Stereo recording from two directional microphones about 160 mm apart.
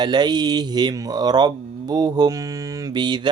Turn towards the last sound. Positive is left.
turn(degrees=-25)  # may be behind; listen again after turning